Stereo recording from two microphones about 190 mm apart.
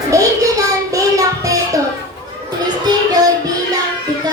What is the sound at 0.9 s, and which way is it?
Music, 15° right (ahead or behind).